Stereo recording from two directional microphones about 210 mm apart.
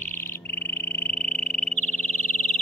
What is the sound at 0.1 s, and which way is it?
Frog, 10° left (ahead or behind).